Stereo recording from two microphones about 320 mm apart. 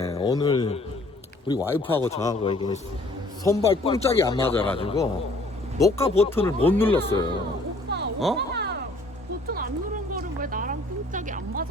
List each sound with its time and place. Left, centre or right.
0.0 s a man's voice: centre
4.8 s speech: centre
8.5 s cat: right
9.5 s a sound: right